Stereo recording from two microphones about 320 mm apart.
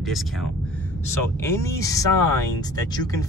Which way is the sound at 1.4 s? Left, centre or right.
Centre.